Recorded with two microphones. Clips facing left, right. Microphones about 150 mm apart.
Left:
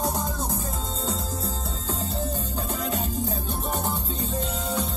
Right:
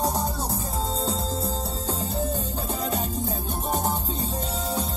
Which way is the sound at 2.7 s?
35° right (ahead or behind).